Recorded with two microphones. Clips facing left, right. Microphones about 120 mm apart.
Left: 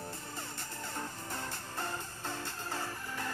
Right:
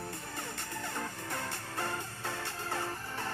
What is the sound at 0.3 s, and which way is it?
Music, 70° right (ahead or behind).